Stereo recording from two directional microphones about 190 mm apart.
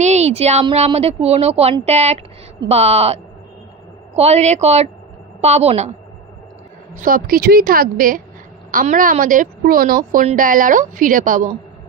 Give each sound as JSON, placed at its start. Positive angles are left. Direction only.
{"t": 0.0, "sound": "a woman's voice", "side_deg": -35}
{"t": 7.0, "sound": "a woman's voice", "side_deg": -50}